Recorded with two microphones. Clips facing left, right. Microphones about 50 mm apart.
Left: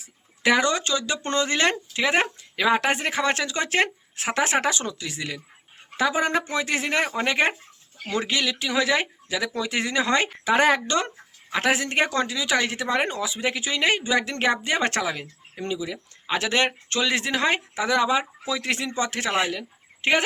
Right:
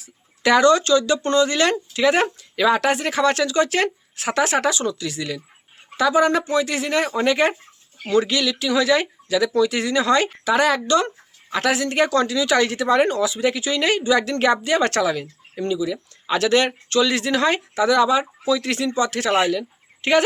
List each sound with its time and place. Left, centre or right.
0.0 s a woman's voice: centre